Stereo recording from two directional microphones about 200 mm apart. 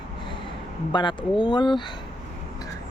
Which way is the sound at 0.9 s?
25° left (ahead or behind).